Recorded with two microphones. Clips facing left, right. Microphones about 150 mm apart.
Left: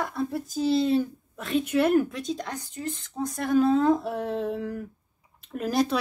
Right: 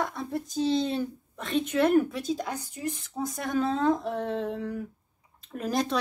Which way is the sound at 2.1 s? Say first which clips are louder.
Right 1 dB; 5° right (ahead or behind).